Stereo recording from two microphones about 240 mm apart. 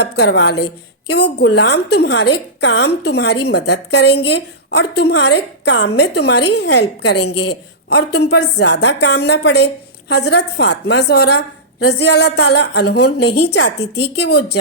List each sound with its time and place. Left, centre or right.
0.0 s a woman's voice: left